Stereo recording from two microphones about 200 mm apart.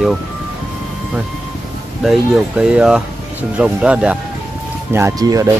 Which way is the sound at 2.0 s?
5° right (ahead or behind).